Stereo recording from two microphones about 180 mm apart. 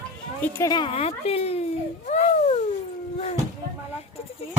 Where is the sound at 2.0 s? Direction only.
40° left (ahead or behind).